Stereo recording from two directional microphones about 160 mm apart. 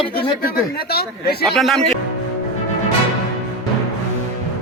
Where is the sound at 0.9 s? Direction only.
80° left.